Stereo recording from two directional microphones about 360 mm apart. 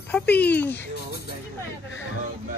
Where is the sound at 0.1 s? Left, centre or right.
Centre.